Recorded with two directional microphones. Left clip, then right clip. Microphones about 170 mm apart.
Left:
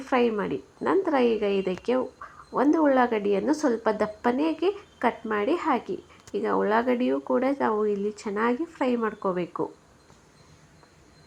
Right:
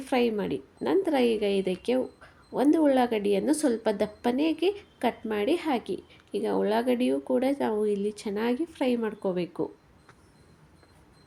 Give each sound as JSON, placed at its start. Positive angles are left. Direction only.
{"t": 0.0, "sound": "a woman's voice", "side_deg": -20}
{"t": 2.2, "sound": "a sound", "side_deg": -25}
{"t": 2.6, "sound": "a woman's voice", "side_deg": -25}